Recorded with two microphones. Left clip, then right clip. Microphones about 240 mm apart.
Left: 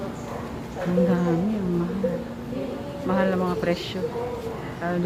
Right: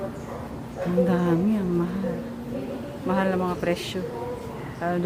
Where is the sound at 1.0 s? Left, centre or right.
Centre.